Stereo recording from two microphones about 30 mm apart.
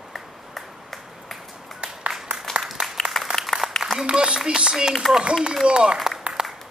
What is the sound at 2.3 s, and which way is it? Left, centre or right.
Applause, right.